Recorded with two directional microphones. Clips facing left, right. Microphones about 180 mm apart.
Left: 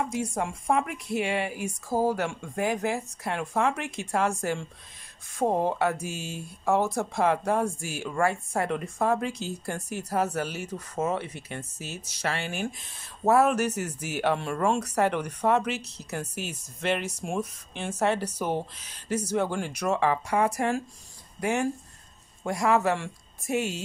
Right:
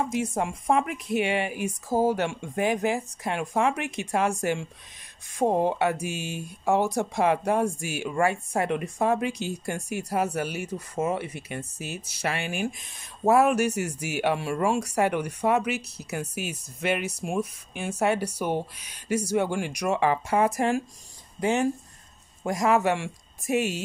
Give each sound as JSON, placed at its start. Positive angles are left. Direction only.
{"t": 0.0, "sound": "speech", "side_deg": -20}